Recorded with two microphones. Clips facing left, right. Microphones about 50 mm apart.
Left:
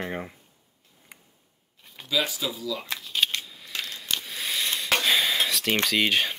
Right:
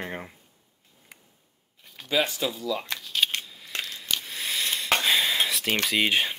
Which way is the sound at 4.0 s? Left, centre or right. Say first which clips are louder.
Even; centre.